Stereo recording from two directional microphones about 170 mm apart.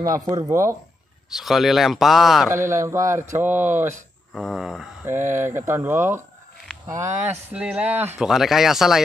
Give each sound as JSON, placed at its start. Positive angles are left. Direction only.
{"t": 0.0, "sound": "speech", "side_deg": -20}
{"t": 1.3, "sound": "speech", "side_deg": 0}
{"t": 2.5, "sound": "speech", "side_deg": -15}
{"t": 4.3, "sound": "speech", "side_deg": 0}
{"t": 5.0, "sound": "speech", "side_deg": -15}